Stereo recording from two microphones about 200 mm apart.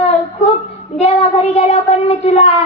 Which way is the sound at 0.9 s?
30° left (ahead or behind).